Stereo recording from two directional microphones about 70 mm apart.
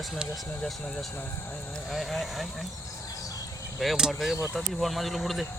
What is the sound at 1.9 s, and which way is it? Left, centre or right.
Speech, centre.